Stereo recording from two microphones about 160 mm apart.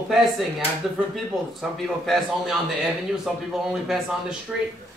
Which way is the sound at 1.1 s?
Centre (ahead or behind).